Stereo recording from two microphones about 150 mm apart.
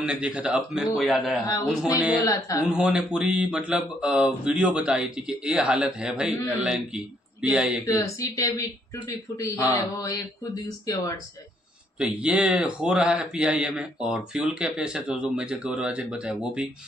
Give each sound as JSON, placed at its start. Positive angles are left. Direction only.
{"t": 0.0, "sound": "a man's voice", "side_deg": -5}
{"t": 2.2, "sound": "speech", "side_deg": 20}
{"t": 2.6, "sound": "a man's voice", "side_deg": -5}
{"t": 7.8, "sound": "speech", "side_deg": 20}
{"t": 9.7, "sound": "speech", "side_deg": 25}
{"t": 12.0, "sound": "a man's voice", "side_deg": -5}